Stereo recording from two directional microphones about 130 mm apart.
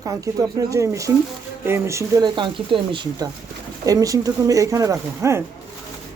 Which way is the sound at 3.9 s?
25° right (ahead or behind).